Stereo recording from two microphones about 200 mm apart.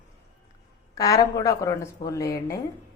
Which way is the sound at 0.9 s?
15° left (ahead or behind).